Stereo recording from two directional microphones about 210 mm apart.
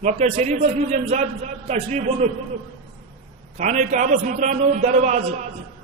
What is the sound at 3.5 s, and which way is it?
A man's voice, 35° right (ahead or behind).